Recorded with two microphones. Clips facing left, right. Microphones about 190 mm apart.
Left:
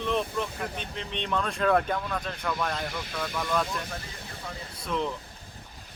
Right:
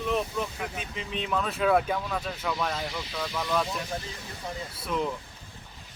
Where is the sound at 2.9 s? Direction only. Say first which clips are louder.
Even; 55° left (ahead or behind).